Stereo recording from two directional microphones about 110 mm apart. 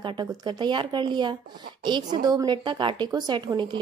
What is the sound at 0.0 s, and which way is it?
A woman's voice, 45° right (ahead or behind).